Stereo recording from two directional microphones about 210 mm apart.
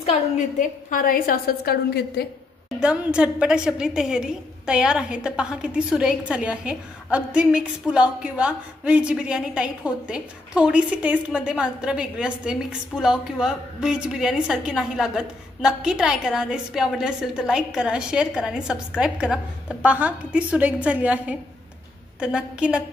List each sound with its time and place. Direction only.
0.0 s a woman's voice: 30° left (ahead or behind); by 2.2 s 45° left (ahead or behind)
2.8 s a woman's voice: 5° right (ahead or behind)